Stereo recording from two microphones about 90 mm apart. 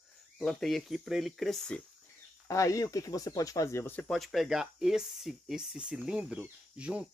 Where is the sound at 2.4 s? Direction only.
35° left (ahead or behind).